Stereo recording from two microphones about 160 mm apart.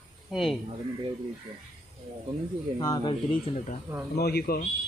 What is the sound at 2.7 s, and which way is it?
Speech, 25° left (ahead or behind).